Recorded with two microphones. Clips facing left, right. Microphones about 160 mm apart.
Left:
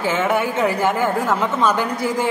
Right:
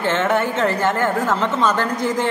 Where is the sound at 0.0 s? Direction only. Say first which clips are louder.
Even; 10° left (ahead or behind).